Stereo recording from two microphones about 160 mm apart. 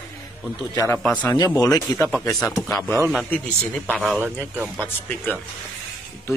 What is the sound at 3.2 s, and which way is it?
Speech, 10° left (ahead or behind).